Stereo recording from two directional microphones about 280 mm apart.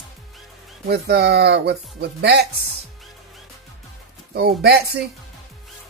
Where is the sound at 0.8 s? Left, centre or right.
Right.